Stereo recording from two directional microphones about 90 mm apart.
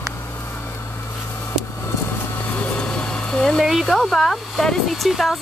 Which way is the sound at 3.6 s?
Centre (ahead or behind).